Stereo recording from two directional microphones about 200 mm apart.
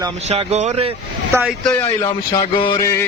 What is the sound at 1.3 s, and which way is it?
Speech, 10° right (ahead or behind).